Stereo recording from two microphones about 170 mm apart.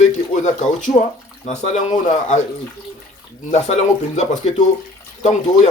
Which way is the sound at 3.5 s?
40° left (ahead or behind).